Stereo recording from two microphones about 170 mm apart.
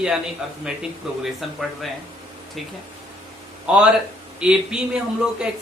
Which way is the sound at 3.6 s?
5° right (ahead or behind).